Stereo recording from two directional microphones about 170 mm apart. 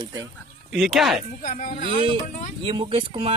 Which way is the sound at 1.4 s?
50° left (ahead or behind).